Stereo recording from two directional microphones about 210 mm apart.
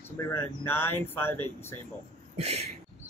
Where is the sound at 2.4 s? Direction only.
30° right (ahead or behind).